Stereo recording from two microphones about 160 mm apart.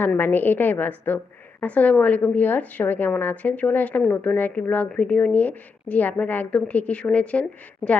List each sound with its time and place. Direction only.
0.0 s a woman's voice: 10° left (ahead or behind)